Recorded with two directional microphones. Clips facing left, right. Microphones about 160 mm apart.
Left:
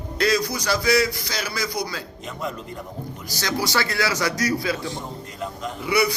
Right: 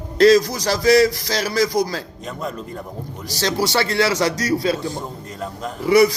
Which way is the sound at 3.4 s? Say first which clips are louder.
Right 4 dB; 30° right (ahead or behind).